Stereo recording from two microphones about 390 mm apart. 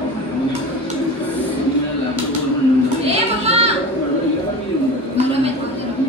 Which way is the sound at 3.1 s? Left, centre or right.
Centre.